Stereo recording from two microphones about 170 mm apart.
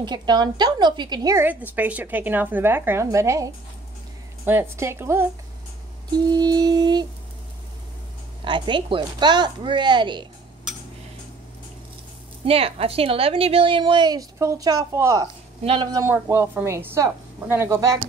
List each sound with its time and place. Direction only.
0.0 s a woman's voice: 25° right (ahead or behind)
6.1 s music: 25° right (ahead or behind)
8.5 s a woman's voice: 30° right (ahead or behind)
12.4 s a woman's voice: 35° right (ahead or behind); by 15.2 s 20° right (ahead or behind)
15.6 s a woman's voice: 30° right (ahead or behind)
16.1 s a woman's voice: 15° right (ahead or behind)